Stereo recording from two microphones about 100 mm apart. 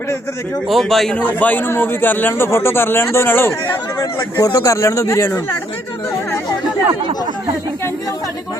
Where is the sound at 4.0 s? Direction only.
35° left (ahead or behind).